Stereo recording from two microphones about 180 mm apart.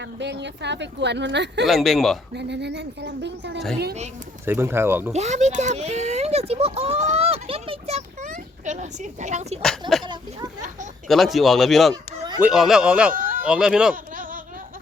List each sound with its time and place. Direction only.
0.0 s speech: 75° right (ahead or behind)
1.6 s speech: centre (ahead or behind)
2.3 s speech: 70° right (ahead or behind)
4.4 s speech: 15° right (ahead or behind)
5.1 s speech: 40° right (ahead or behind)
10.0 s speech: 25° right (ahead or behind)
11.1 s speech: centre (ahead or behind)
13.1 s bleat: 50° right (ahead or behind)
13.4 s speech: 5° right (ahead or behind)
13.9 s a sound: 50° right (ahead or behind)